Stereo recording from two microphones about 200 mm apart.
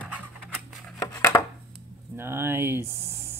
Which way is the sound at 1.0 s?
15° left (ahead or behind).